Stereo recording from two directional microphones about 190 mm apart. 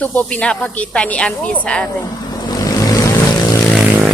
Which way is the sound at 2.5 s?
20° left (ahead or behind).